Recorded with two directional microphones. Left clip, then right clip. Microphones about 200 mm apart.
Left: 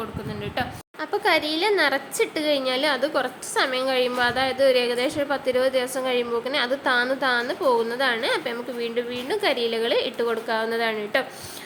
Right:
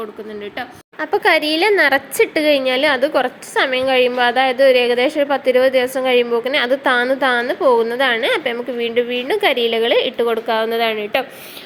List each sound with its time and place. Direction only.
1.1 s a woman's voice: 25° right (ahead or behind)